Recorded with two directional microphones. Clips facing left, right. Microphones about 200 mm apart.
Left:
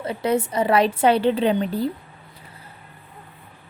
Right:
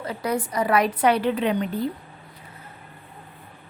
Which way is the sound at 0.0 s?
25° left (ahead or behind).